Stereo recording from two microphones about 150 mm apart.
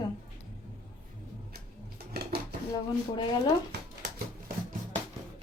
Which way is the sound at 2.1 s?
90° right.